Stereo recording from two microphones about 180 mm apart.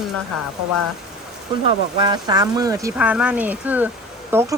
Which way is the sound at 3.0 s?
5° right (ahead or behind).